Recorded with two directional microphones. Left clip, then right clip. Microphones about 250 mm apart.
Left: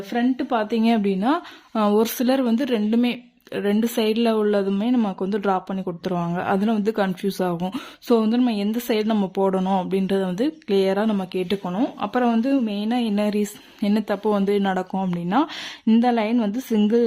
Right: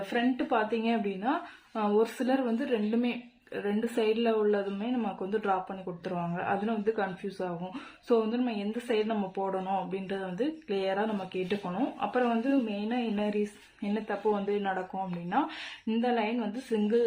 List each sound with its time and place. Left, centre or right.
0.1 s a woman's voice: left